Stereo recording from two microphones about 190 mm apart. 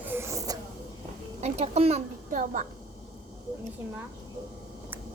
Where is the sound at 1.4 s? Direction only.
35° right (ahead or behind).